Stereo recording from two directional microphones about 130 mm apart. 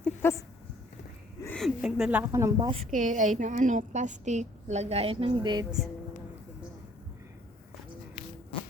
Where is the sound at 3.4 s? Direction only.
70° right (ahead or behind); by 5.6 s 35° right (ahead or behind).